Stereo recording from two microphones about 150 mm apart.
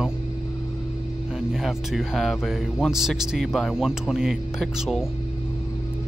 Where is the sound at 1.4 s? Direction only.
Centre (ahead or behind).